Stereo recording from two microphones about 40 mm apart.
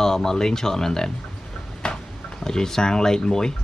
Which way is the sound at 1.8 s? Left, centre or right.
Left.